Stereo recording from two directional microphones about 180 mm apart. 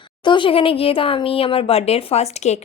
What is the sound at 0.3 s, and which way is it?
Speech, 30° left (ahead or behind).